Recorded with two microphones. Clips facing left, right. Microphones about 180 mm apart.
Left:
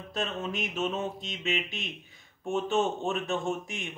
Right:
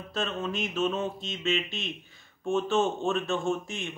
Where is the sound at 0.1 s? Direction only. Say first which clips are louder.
Right 1 dB; 20° left (ahead or behind).